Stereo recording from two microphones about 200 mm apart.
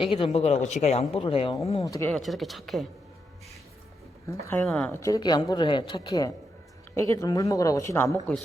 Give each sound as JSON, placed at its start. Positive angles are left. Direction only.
{"t": 0.0, "sound": "speech", "side_deg": 25}
{"t": 1.7, "sound": "speech", "side_deg": 15}
{"t": 4.4, "sound": "a woman's voice", "side_deg": 10}